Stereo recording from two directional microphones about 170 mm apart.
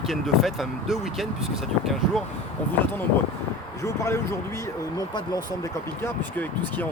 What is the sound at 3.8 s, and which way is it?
Speech, 15° left (ahead or behind).